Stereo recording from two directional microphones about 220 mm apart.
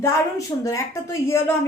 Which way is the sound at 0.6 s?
15° left (ahead or behind).